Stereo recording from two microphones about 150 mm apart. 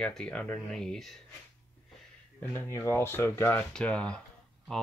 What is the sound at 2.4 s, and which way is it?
Speech, 15° left (ahead or behind).